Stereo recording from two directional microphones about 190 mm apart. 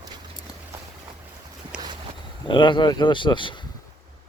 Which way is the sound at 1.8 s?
25° right (ahead or behind).